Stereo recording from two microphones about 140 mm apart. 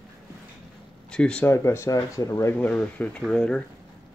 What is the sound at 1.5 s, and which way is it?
Speech, 20° left (ahead or behind).